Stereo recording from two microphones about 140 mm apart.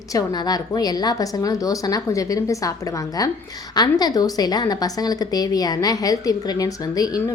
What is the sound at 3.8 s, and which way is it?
A woman's voice, 30° left (ahead or behind).